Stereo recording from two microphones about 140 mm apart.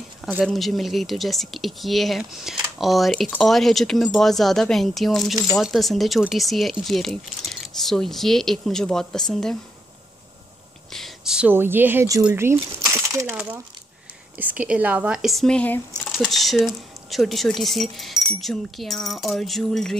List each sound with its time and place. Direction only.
0.4 s speech: centre (ahead or behind)
10.9 s speech: centre (ahead or behind); by 12.5 s 15° right (ahead or behind)
12.8 s a sound: 20° right (ahead or behind)
14.3 s speech: 10° right (ahead or behind)